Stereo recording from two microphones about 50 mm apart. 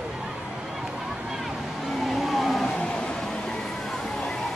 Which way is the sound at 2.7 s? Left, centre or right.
Left.